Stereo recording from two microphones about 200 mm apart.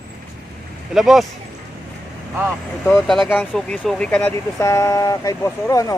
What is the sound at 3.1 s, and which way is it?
Speech, centre (ahead or behind).